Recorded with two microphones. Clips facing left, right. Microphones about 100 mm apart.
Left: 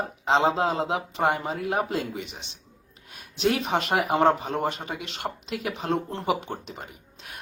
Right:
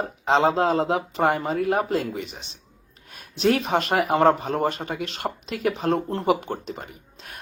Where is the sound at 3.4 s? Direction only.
Centre (ahead or behind).